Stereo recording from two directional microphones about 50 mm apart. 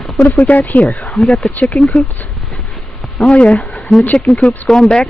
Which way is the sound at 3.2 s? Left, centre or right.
Left.